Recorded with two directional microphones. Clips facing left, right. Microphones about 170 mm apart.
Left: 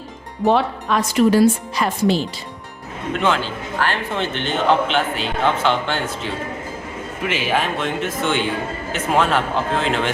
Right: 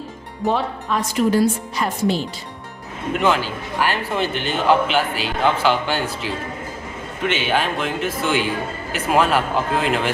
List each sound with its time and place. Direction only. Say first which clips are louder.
0.4 s a woman's voice: left 4 dB; 75° left (ahead or behind); by 2.1 s 90° left
3.1 s a man's voice: right 1 dB; 5° right (ahead or behind)